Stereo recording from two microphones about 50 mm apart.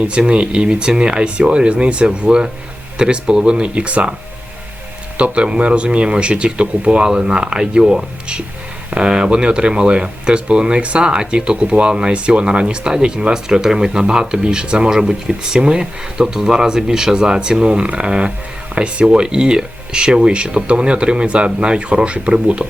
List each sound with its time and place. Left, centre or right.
0.1 s speech: right
5.1 s speech: right